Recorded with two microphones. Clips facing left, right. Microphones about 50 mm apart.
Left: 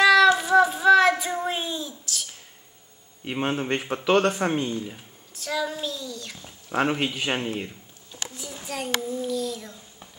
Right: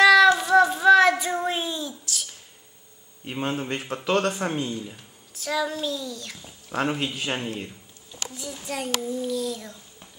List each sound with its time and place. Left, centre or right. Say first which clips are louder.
0.0 s child singing: right 1 dB; centre
3.3 s a man's voice: left 2 dB; left
5.3 s speech: right 1 dB; centre
6.7 s a man's voice: left 2 dB; centre
8.6 s speech: even; centre